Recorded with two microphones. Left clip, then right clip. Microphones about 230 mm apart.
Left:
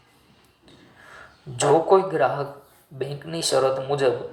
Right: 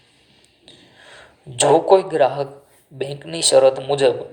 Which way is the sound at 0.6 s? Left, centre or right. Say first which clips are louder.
Right 4 dB; right.